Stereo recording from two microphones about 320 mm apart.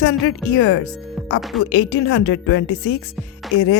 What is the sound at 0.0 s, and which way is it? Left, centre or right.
Speech, left.